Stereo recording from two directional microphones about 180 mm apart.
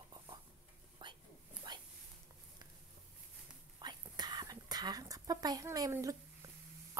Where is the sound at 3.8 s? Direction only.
25° right (ahead or behind).